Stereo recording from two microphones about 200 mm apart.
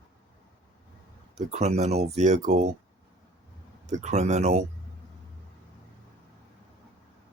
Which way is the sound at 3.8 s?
35° right (ahead or behind).